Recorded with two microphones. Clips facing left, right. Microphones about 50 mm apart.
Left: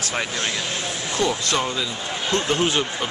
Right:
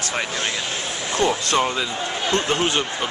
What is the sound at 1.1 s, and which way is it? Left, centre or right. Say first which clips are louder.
Speech: right 3 dB; right.